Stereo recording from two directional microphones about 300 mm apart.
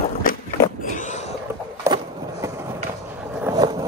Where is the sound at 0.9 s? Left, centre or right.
Left.